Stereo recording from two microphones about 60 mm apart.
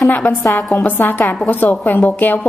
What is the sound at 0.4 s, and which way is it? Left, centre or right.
Speech, centre.